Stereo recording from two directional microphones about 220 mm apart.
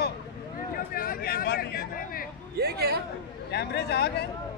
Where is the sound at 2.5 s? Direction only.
45° right (ahead or behind).